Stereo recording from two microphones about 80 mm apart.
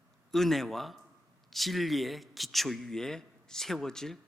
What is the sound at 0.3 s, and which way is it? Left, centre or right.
A man's voice, centre.